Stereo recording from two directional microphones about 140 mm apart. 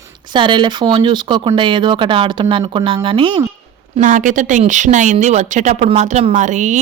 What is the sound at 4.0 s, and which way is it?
A woman's voice, 65° right (ahead or behind).